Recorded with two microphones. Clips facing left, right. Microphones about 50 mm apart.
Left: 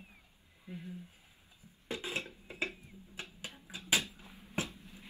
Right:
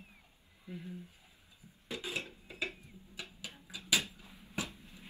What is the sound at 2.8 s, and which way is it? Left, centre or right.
Music, left.